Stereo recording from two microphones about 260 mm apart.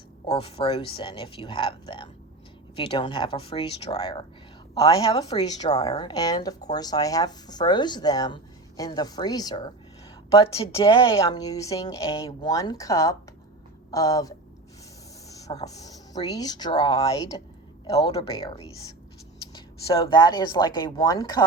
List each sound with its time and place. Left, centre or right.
0.3 s speech: left